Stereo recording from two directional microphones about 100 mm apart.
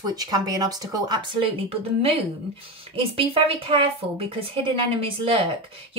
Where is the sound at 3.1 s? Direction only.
70° right (ahead or behind).